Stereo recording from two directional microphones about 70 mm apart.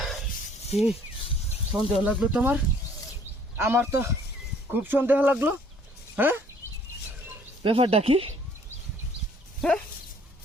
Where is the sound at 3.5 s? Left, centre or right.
Right.